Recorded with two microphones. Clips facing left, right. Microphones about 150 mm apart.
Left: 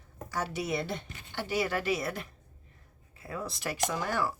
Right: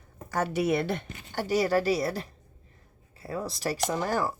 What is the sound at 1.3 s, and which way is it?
Speech, 40° right (ahead or behind).